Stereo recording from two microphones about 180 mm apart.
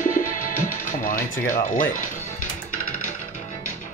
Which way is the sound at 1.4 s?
50° left (ahead or behind).